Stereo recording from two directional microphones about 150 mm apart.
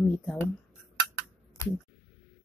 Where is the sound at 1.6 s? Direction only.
20° left (ahead or behind).